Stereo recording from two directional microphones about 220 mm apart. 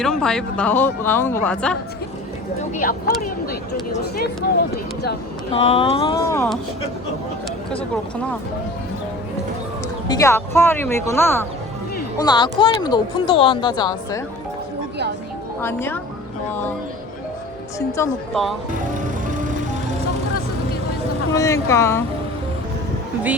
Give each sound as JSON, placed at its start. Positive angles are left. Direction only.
{"t": 0.0, "sound": "speech", "side_deg": 5}
{"t": 2.7, "sound": "speech", "side_deg": 40}
{"t": 5.5, "sound": "speech", "side_deg": 25}
{"t": 10.1, "sound": "speech", "side_deg": 15}
{"t": 15.6, "sound": "speech", "side_deg": 10}
{"t": 17.7, "sound": "speech", "side_deg": 15}
{"t": 18.9, "sound": "music", "side_deg": -35}
{"t": 21.3, "sound": "speech", "side_deg": 15}